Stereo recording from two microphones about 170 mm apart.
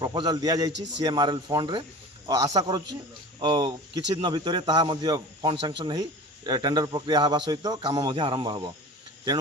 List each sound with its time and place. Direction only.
0.0 s a man's voice: 25° right (ahead or behind)